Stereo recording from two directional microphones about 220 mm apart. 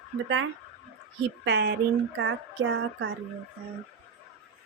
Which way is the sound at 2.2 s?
55° right (ahead or behind).